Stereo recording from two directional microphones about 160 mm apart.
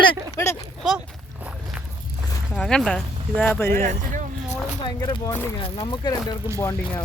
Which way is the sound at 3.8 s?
50° right (ahead or behind).